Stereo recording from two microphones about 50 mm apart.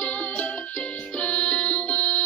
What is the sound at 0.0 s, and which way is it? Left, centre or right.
Music, left.